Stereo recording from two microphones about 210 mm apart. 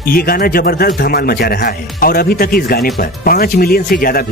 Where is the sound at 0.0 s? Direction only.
45° left (ahead or behind).